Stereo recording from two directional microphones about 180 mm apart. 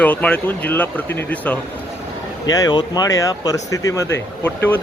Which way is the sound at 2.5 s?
20° left (ahead or behind).